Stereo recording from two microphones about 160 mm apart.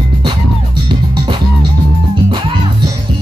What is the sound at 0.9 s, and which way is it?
Music, 30° right (ahead or behind).